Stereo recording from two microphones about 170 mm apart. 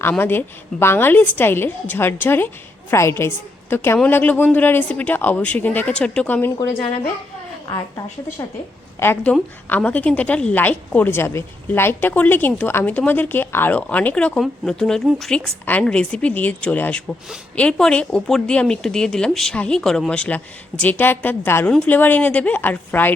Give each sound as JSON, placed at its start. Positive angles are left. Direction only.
{"t": 0.0, "sound": "a woman's voice", "side_deg": 10}
{"t": 7.7, "sound": "a woman's voice", "side_deg": 20}